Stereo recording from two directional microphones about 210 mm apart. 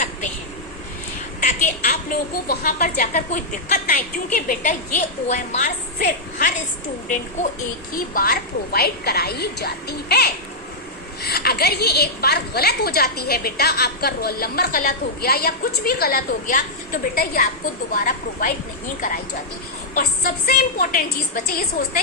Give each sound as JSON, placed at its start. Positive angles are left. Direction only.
{"t": 1.4, "sound": "a woman's voice", "side_deg": 35}
{"t": 7.9, "sound": "a woman's voice", "side_deg": 45}
{"t": 19.9, "sound": "a woman's voice", "side_deg": 45}